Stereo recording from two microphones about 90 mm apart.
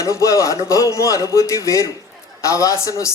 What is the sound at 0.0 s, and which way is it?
A man's voice, 35° left (ahead or behind).